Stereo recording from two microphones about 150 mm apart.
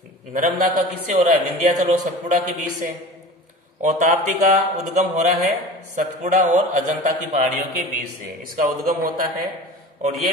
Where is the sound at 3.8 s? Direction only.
55° right (ahead or behind).